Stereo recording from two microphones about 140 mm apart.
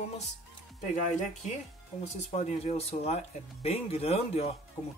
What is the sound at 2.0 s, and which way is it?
Speech, 50° left (ahead or behind).